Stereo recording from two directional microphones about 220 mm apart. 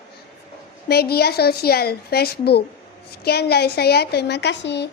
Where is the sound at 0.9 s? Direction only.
45° left (ahead or behind).